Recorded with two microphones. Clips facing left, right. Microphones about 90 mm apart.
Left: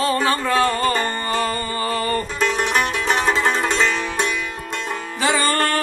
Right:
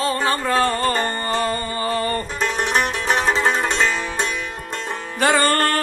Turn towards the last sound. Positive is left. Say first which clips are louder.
# right 2 dB
turn(degrees=-45)  # may be behind; listen again after turning